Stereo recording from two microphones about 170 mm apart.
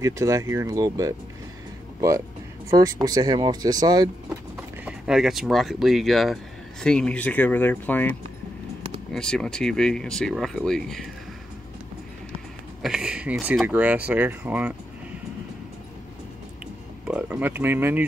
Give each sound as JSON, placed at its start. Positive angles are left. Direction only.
{"t": 0.0, "sound": "speech", "side_deg": -20}
{"t": 4.8, "sound": "speech", "side_deg": -5}
{"t": 12.8, "sound": "speech", "side_deg": -5}
{"t": 17.1, "sound": "speech", "side_deg": -10}